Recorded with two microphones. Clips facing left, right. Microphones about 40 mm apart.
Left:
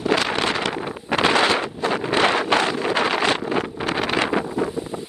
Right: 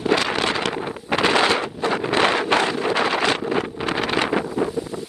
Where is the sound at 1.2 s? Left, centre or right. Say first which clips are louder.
Even; left.